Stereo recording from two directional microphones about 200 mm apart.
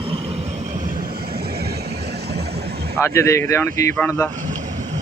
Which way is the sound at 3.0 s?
15° left (ahead or behind).